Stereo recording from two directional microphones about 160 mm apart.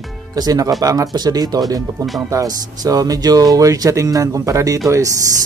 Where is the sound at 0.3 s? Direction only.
25° right (ahead or behind).